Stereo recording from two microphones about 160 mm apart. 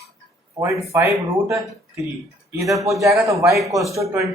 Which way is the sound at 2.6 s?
20° right (ahead or behind).